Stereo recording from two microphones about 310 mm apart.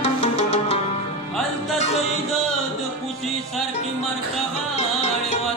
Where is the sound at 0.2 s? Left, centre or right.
Centre.